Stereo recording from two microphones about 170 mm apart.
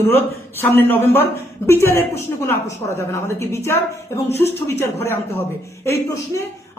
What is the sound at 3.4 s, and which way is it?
A woman's voice, 15° left (ahead or behind).